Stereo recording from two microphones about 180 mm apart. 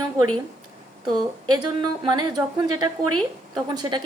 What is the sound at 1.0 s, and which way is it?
A woman's voice, 20° right (ahead or behind).